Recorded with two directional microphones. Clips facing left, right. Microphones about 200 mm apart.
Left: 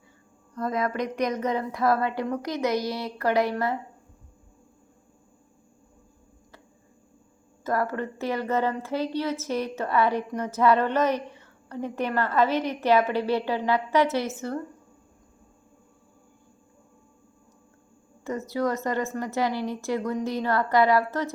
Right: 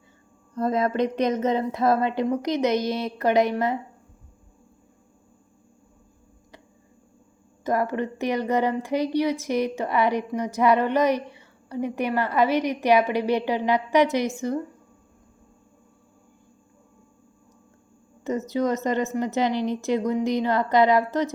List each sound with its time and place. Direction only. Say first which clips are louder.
0.5 s a woman's voice: right 4 dB; 25° right (ahead or behind)
7.6 s speech: right 3 dB; 20° right (ahead or behind)
18.2 s a woman's voice: right 3 dB; 20° right (ahead or behind)